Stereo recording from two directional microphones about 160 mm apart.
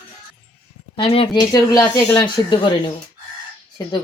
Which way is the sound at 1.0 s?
35° left (ahead or behind).